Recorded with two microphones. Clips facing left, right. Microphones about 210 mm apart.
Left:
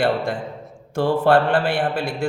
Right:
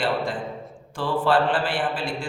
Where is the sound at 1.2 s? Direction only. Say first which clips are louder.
Left 3 dB; 65° left (ahead or behind).